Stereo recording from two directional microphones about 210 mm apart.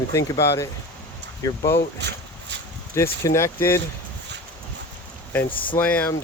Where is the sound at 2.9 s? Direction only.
15° left (ahead or behind).